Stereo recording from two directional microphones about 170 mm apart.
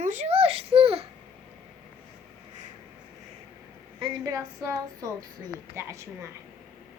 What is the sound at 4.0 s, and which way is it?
A woman's voice, 25° right (ahead or behind).